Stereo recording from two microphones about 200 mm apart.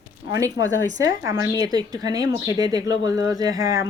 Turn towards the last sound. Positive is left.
turn(degrees=-15)  # may be behind; listen again after turning